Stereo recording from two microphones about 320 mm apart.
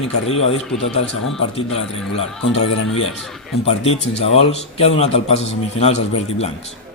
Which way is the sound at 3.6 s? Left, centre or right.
Centre.